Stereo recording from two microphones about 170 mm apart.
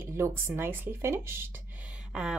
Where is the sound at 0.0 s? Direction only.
15° right (ahead or behind).